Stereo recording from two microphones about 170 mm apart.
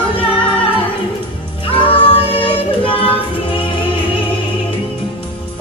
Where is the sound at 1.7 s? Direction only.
30° left (ahead or behind).